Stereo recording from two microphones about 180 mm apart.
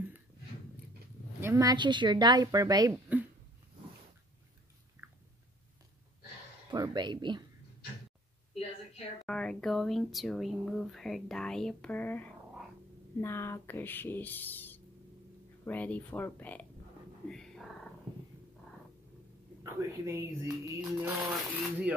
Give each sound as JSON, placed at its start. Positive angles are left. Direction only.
{"t": 1.4, "sound": "speech", "side_deg": -15}
{"t": 2.9, "sound": "a sound", "side_deg": -10}
{"t": 6.7, "sound": "speech", "side_deg": -25}
{"t": 9.2, "sound": "speech", "side_deg": 5}
{"t": 17.3, "sound": "cat", "side_deg": 5}
{"t": 19.6, "sound": "speech", "side_deg": -15}